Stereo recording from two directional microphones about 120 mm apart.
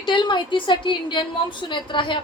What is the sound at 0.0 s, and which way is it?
A woman's voice, 40° left (ahead or behind).